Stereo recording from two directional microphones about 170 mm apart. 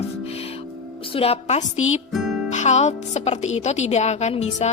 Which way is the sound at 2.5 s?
40° left (ahead or behind).